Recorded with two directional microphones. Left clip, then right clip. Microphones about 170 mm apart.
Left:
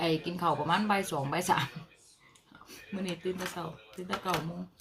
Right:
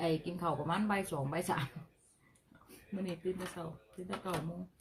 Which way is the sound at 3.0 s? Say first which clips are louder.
Left 4 dB; 5° left (ahead or behind).